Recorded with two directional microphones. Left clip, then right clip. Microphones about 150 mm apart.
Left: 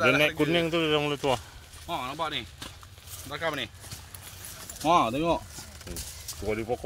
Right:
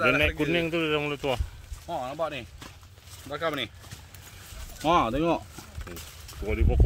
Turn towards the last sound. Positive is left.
turn(degrees=0)  # may be behind; listen again after turning